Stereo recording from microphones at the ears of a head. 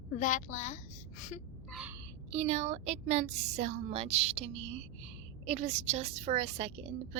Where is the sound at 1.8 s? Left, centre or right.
Right.